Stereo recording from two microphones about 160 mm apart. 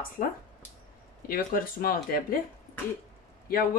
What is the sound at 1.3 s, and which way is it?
Speech, 65° left (ahead or behind).